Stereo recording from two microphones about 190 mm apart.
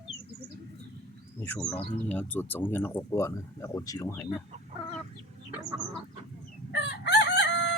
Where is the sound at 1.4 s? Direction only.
10° left (ahead or behind).